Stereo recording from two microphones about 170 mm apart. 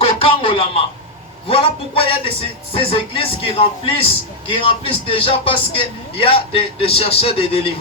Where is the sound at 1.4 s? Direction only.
35° left (ahead or behind).